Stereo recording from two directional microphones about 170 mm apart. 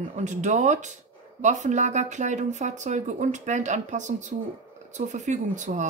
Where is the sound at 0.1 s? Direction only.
45° right (ahead or behind).